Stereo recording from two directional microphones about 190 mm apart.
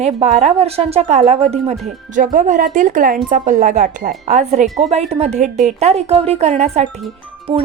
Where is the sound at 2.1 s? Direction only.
45° right (ahead or behind).